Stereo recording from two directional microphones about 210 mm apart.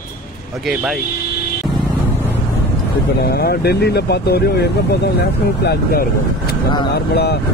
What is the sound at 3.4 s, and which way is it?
Speech, 50° left (ahead or behind).